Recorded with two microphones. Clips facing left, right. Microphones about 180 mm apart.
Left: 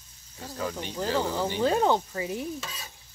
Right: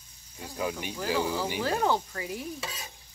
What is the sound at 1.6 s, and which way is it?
Speech, 20° left (ahead or behind).